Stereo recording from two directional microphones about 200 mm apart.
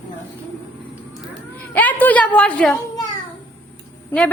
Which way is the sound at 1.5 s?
10° left (ahead or behind).